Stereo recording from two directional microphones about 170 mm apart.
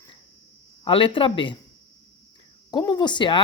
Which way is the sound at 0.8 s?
30° left (ahead or behind).